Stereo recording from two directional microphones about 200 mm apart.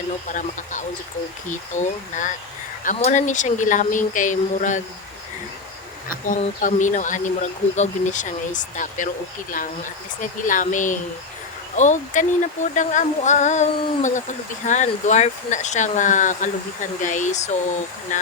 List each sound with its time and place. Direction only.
0.3 s speech: 40° left (ahead or behind)
6.1 s speech: 40° left (ahead or behind)